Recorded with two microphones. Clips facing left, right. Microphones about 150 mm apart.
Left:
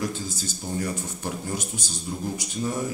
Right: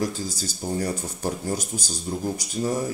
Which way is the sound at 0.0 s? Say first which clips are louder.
Right 2 dB; 40° right (ahead or behind).